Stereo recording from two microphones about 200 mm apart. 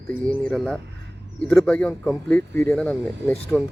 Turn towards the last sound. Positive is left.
turn(degrees=-5)  # may be behind; listen again after turning